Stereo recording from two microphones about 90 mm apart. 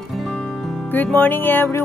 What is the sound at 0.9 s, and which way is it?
Music, 20° left (ahead or behind).